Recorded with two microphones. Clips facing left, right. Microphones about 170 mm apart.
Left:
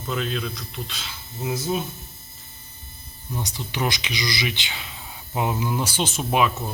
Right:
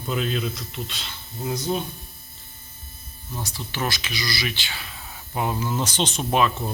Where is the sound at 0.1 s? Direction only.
Centre (ahead or behind).